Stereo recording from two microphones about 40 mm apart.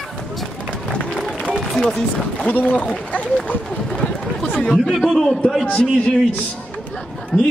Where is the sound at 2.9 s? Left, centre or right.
Left.